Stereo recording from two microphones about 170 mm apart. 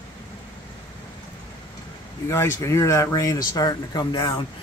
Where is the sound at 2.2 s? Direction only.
15° left (ahead or behind).